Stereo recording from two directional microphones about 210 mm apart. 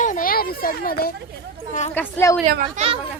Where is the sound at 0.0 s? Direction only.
40° left (ahead or behind).